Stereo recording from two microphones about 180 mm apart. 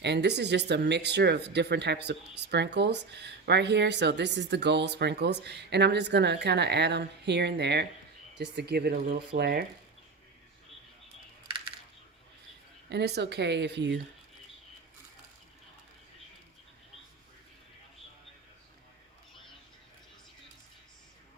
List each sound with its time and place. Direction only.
0.0 s speech: 70° right (ahead or behind)
12.9 s speech: 70° right (ahead or behind)